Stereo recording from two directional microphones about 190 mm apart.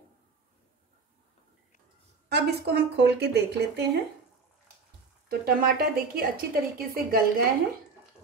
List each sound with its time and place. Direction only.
2.2 s speech: 60° right (ahead or behind)
5.3 s a woman's voice: 55° right (ahead or behind)